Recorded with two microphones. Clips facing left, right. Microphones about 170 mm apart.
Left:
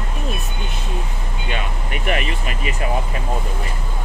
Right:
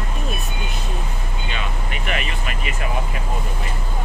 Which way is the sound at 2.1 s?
45° left (ahead or behind).